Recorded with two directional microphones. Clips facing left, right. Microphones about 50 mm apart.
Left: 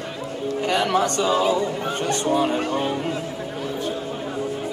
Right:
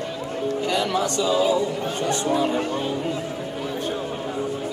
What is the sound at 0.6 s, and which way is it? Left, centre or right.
Speech, left.